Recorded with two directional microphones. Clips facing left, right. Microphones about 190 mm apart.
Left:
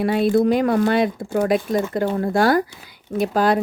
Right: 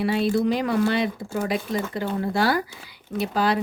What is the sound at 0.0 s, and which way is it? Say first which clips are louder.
Speech: left 5 dB; 50° left (ahead or behind).